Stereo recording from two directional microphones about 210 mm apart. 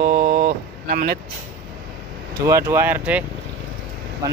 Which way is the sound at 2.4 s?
15° right (ahead or behind).